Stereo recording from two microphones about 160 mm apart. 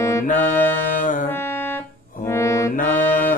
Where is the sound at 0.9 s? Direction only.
55° left (ahead or behind).